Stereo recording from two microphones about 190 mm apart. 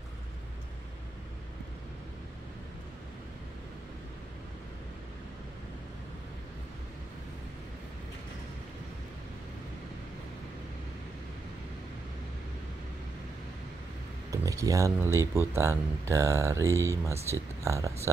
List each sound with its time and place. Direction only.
14.3 s speech: 15° right (ahead or behind)